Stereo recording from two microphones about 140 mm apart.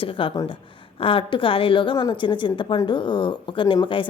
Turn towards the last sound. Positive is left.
turn(degrees=35)  # may be behind; listen again after turning